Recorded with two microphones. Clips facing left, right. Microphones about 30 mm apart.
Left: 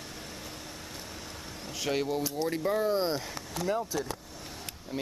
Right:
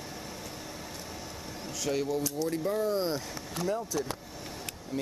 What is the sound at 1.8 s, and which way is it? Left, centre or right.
Speech, left.